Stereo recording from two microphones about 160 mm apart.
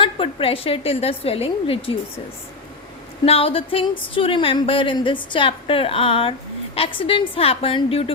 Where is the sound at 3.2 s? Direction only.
35° left (ahead or behind).